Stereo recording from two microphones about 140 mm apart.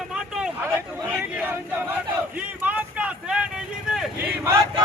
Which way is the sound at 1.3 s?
15° right (ahead or behind).